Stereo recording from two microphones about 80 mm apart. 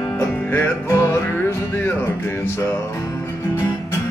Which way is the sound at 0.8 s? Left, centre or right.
Left.